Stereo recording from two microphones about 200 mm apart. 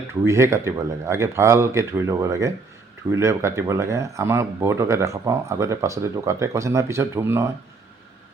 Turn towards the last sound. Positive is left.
turn(degrees=-15)  # may be behind; listen again after turning